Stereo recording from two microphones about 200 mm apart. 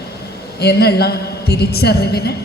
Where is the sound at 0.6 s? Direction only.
55° left (ahead or behind).